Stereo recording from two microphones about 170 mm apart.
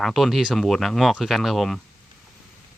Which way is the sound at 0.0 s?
Centre (ahead or behind).